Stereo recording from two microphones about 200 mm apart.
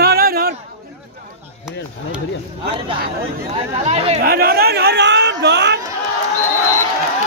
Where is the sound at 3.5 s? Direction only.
30° right (ahead or behind).